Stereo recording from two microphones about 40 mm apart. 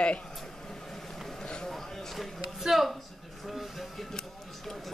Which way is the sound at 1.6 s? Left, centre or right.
Centre.